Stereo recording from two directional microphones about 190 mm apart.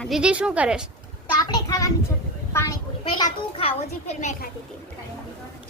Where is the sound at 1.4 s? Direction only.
20° left (ahead or behind).